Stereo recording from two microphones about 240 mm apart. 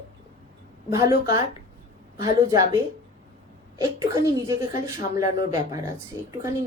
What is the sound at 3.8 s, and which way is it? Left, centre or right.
Speech, centre.